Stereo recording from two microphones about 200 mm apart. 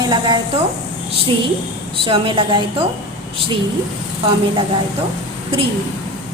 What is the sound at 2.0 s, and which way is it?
Speech, 25° right (ahead or behind).